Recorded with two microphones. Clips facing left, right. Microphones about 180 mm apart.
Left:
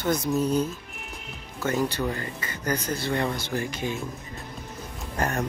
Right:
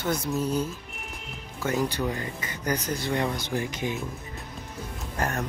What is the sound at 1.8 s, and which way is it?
Speech, 15° right (ahead or behind).